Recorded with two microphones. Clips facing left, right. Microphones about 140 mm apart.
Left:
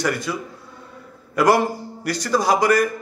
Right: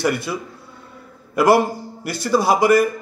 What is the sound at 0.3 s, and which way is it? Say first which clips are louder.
Speech: right 1 dB; 20° right (ahead or behind).